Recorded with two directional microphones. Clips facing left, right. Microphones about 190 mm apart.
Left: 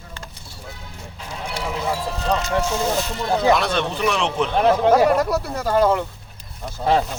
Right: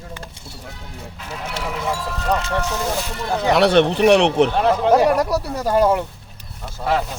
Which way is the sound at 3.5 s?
70° right (ahead or behind).